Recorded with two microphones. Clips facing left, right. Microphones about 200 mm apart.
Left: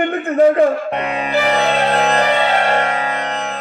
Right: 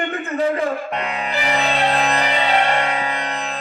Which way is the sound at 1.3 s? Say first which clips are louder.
Left 6 dB; 65° left (ahead or behind).